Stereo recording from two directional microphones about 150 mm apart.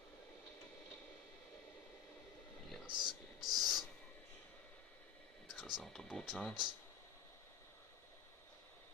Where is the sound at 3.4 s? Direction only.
Centre (ahead or behind).